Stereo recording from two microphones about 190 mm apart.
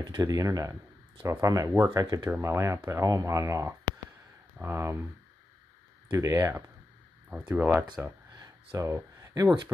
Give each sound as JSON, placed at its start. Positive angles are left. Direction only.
{"t": 0.0, "sound": "speech", "side_deg": -20}
{"t": 6.0, "sound": "speech", "side_deg": -15}
{"t": 8.4, "sound": "a sound", "side_deg": -15}